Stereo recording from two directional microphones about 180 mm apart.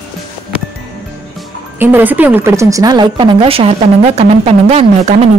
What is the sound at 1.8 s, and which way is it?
A woman's voice, 10° right (ahead or behind).